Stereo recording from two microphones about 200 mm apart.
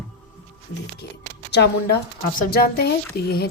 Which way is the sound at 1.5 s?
55° left (ahead or behind).